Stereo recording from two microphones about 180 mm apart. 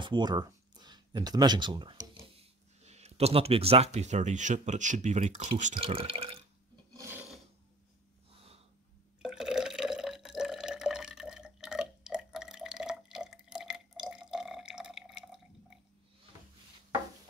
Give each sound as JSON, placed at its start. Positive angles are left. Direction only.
{"t": 0.0, "sound": "speech", "side_deg": -25}
{"t": 2.2, "sound": "speech", "side_deg": -35}
{"t": 7.0, "sound": "filing", "side_deg": -10}
{"t": 9.2, "sound": "water", "side_deg": -5}